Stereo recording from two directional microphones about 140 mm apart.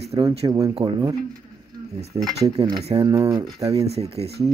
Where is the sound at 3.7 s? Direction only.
45° right (ahead or behind).